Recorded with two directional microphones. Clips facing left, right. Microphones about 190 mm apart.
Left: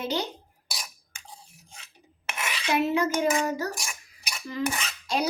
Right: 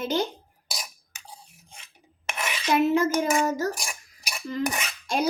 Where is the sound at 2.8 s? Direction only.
45° right (ahead or behind).